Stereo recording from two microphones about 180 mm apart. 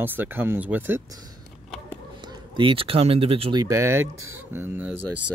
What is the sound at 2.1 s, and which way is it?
Speech, 25° right (ahead or behind).